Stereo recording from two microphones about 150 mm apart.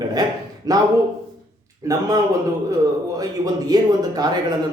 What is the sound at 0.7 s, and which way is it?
Speech, 25° right (ahead or behind).